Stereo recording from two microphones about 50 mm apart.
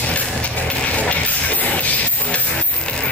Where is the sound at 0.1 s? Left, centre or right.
Left.